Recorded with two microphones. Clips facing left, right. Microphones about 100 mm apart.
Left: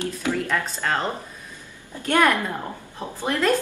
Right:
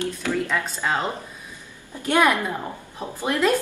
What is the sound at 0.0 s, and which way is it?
Speech, 20° left (ahead or behind).